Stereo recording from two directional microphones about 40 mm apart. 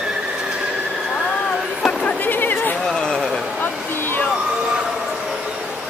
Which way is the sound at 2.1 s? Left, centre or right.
Left.